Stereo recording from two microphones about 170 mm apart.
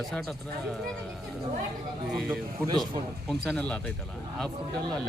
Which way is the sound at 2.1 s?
Centre (ahead or behind).